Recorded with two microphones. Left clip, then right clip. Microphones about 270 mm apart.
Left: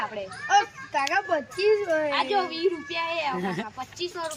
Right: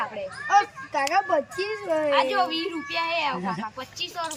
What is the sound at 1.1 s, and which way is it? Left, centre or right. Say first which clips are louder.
A woman's voice: right 3 dB; centre.